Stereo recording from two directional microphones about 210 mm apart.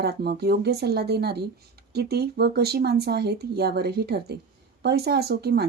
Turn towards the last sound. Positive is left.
turn(degrees=-50)  # may be behind; listen again after turning